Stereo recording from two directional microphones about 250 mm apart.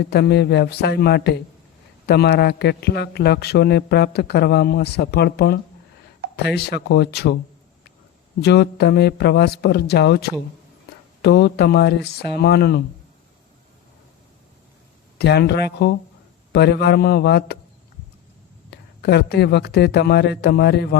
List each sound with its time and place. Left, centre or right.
0.0 s a man's voice: left
8.4 s a man's voice: left
15.2 s a man's voice: left
18.7 s a man's voice: left